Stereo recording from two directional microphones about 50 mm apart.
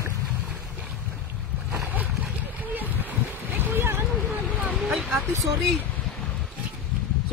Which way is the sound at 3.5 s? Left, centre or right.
Right.